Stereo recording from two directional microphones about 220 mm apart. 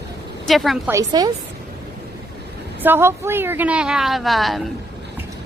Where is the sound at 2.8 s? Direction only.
10° right (ahead or behind).